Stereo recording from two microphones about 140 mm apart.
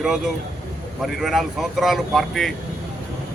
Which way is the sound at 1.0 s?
Centre (ahead or behind).